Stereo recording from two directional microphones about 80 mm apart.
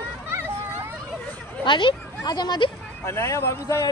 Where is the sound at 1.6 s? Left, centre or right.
Left.